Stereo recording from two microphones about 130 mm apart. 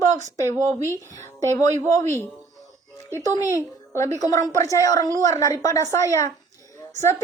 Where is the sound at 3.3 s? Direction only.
20° right (ahead or behind).